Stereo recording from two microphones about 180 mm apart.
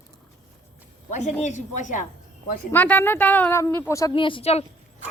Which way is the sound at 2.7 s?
10° left (ahead or behind).